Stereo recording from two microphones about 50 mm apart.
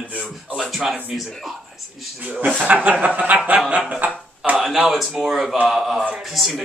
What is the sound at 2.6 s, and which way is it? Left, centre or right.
Speech, right.